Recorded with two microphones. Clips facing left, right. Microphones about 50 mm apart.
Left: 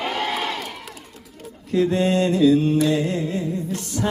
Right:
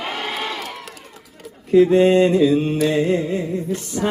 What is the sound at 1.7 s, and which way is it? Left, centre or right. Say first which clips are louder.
Music: right 7 dB; right.